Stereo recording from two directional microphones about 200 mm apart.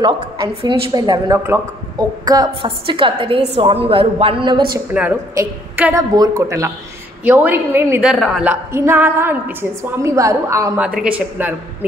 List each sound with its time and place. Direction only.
0.0 s a woman's voice: 25° right (ahead or behind)
4.7 s a woman's voice: 5° right (ahead or behind)